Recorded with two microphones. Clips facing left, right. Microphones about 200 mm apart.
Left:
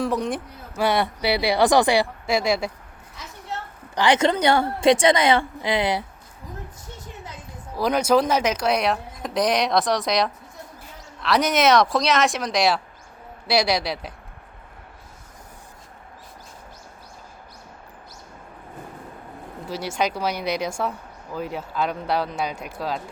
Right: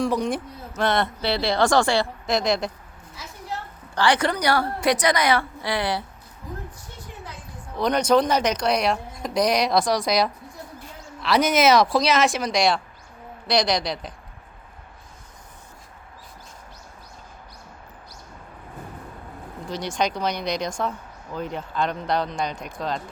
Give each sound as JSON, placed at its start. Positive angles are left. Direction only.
{"t": 0.0, "sound": "speech", "side_deg": 0}
{"t": 0.7, "sound": "a woman's voice", "side_deg": 10}
{"t": 3.9, "sound": "a woman's voice", "side_deg": 20}
{"t": 7.8, "sound": "speech", "side_deg": 5}
{"t": 19.6, "sound": "a woman's voice", "side_deg": 5}